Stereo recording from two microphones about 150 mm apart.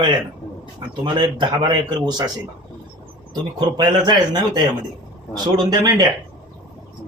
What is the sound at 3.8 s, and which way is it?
Speech, 30° right (ahead or behind).